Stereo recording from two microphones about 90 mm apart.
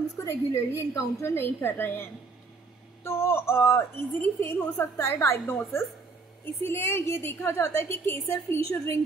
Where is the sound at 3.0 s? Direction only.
25° left (ahead or behind).